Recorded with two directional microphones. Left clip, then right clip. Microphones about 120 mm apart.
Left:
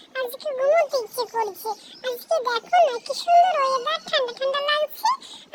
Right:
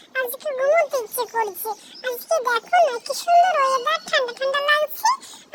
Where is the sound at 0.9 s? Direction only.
25° right (ahead or behind).